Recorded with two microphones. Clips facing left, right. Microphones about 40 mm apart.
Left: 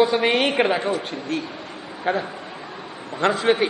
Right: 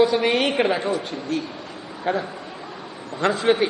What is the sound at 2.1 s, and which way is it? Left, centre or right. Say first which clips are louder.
Speech: left 1 dB; centre.